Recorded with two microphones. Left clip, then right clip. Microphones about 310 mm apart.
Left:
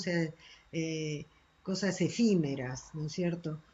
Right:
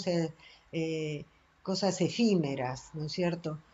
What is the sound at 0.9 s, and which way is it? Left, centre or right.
Speech, right.